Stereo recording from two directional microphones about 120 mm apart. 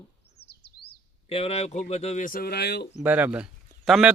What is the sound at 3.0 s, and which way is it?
Speech, 10° right (ahead or behind).